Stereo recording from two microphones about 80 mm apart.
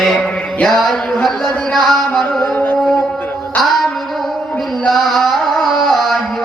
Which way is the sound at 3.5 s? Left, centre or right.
Centre.